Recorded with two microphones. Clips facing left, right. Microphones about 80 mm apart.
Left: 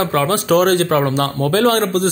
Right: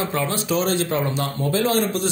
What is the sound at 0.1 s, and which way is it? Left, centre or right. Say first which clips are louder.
Speech: left 8 dB; left.